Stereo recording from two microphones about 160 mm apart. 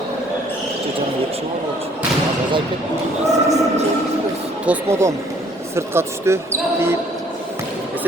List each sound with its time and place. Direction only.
3.2 s speech: 45° right (ahead or behind)
4.6 s speech: 15° right (ahead or behind)